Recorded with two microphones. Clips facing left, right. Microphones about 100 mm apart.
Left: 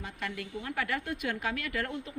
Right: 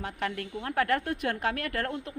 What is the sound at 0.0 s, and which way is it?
A woman's voice, 55° right (ahead or behind).